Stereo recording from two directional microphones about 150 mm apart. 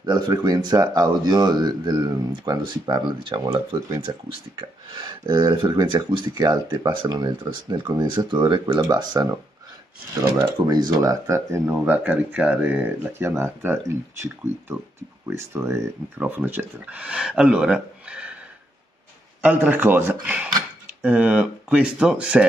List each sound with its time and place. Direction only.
0.0 s speech: 25° right (ahead or behind)
15.2 s speech: 20° right (ahead or behind)
19.4 s speech: 10° right (ahead or behind)